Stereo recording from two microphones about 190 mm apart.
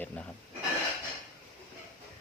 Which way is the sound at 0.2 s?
5° left (ahead or behind).